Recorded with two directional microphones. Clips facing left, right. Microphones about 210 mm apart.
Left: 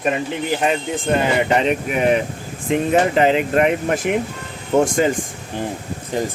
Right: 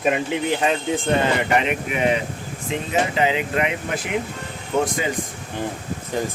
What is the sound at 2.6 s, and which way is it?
Speech, 55° left (ahead or behind).